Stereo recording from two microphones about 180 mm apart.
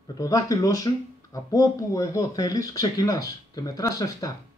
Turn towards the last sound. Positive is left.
turn(degrees=20)  # may be behind; listen again after turning